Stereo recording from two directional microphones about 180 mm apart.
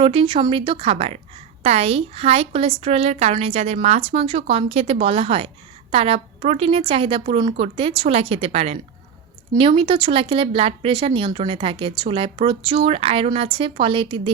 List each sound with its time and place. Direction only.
0.0 s a woman's voice: 30° right (ahead or behind)